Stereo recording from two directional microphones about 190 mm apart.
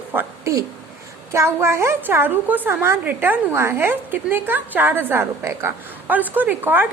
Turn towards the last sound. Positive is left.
turn(degrees=-10)  # may be behind; listen again after turning